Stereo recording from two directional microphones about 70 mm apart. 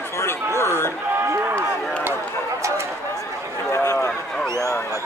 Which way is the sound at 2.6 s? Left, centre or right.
Right.